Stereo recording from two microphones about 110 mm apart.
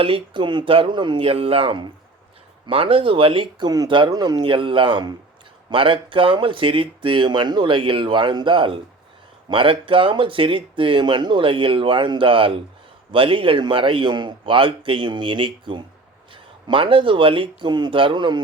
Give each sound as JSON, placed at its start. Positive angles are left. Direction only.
{"t": 0.0, "sound": "speech", "side_deg": -50}